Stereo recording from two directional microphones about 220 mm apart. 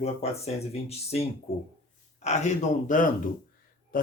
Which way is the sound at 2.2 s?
30° left (ahead or behind).